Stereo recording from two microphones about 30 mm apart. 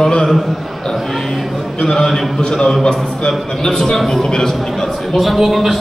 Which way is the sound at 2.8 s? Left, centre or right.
Left.